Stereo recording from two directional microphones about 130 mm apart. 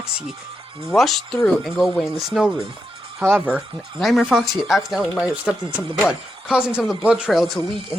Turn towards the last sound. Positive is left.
turn(degrees=0)  # may be behind; listen again after turning